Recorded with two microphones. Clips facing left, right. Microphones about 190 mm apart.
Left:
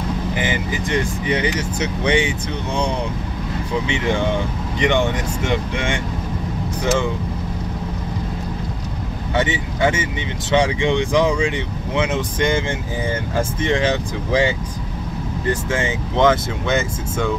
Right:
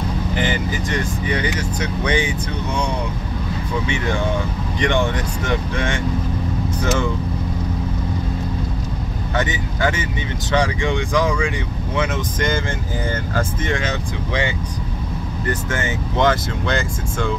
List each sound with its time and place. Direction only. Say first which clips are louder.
0.4 s speech: right 3 dB; 15° left (ahead or behind)
4.7 s speech: left 2 dB; 15° left (ahead or behind)
9.4 s speech: left 3 dB; 25° left (ahead or behind)
13.4 s speech: left 4 dB; 25° left (ahead or behind)
15.7 s speech: left 2 dB; 25° left (ahead or behind)